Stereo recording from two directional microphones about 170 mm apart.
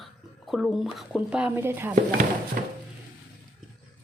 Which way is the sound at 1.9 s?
50° right (ahead or behind).